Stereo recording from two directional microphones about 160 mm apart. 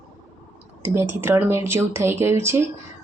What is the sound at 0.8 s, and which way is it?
A woman's voice, 15° right (ahead or behind).